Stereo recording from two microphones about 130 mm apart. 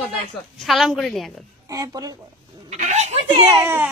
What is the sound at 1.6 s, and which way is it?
Speech, 30° right (ahead or behind).